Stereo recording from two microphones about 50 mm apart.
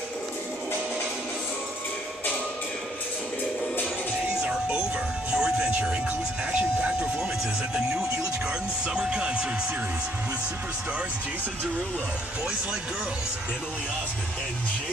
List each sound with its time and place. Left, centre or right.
4.4 s music: centre
5.7 s speech: right
7.7 s speech: centre